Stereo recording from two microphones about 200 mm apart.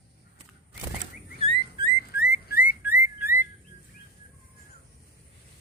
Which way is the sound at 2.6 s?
10° right (ahead or behind).